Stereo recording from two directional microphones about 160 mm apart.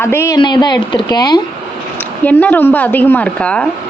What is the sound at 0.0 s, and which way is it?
Speech, 15° left (ahead or behind).